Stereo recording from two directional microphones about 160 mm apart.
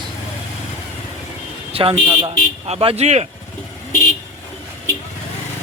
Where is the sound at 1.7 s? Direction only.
35° right (ahead or behind).